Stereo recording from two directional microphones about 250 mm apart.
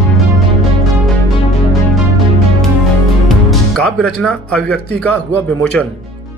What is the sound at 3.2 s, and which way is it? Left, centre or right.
Speech, centre.